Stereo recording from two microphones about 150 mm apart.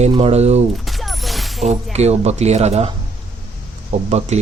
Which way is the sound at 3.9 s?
45° right (ahead or behind).